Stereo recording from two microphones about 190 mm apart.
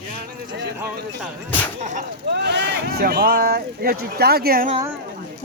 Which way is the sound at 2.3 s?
60° right (ahead or behind).